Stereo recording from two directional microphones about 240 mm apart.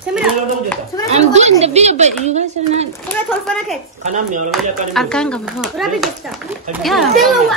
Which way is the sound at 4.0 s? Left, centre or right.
Right.